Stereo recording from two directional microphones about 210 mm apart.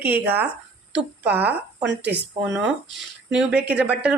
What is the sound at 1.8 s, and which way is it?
Speech, 55° right (ahead or behind).